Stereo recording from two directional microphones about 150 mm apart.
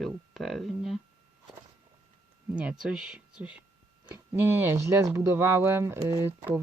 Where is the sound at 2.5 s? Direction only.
5° right (ahead or behind).